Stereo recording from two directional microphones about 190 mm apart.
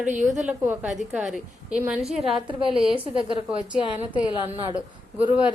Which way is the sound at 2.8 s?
30° right (ahead or behind).